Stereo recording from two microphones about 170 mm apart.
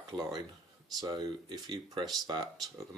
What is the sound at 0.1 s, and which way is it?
Speech, 20° right (ahead or behind).